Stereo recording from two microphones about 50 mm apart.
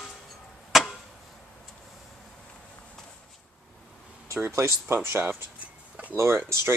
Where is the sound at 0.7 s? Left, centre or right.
Centre.